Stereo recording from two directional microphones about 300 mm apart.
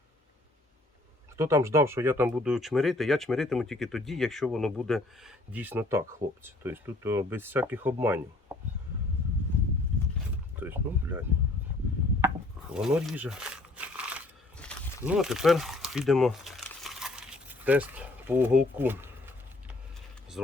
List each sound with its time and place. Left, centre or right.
1.4 s speech: centre
10.6 s speech: centre
12.7 s crumpling: centre